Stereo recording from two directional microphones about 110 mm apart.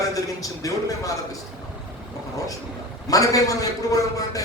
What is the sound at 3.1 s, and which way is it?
A man's voice, 30° left (ahead or behind).